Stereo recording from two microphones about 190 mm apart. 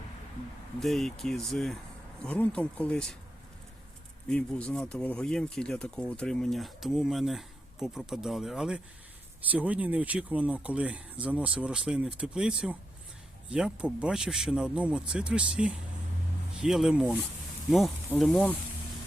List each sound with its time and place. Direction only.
0.8 s speech: centre (ahead or behind)
4.3 s speech: 5° left (ahead or behind)